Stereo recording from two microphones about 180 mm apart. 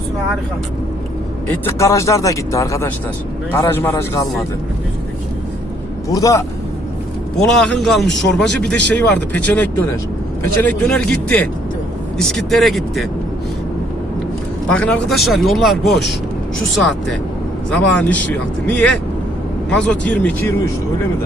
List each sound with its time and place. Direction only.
1.6 s speech: 15° left (ahead or behind)
6.1 s a man's voice: 20° left (ahead or behind)
7.3 s speech: 5° left (ahead or behind)
14.7 s speech: 5° left (ahead or behind)
16.7 s speech: centre (ahead or behind)